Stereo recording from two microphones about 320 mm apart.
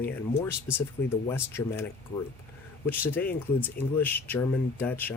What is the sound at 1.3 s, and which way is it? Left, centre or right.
Speech, centre.